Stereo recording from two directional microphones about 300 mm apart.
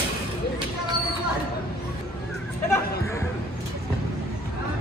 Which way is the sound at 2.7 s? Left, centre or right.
Centre.